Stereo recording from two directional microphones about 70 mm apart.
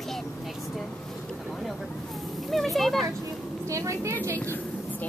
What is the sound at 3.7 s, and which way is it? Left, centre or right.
Speech, right.